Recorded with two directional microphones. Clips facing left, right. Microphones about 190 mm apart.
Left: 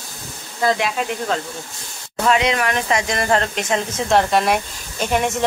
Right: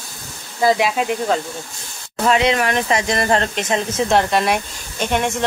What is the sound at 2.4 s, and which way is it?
Speech, 30° right (ahead or behind).